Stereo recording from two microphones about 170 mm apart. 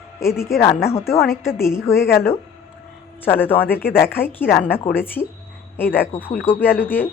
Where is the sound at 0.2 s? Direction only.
15° left (ahead or behind).